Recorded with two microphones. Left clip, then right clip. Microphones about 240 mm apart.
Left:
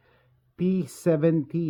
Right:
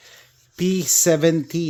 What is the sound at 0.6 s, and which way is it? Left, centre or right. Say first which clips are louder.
Speech: right 9 dB; centre.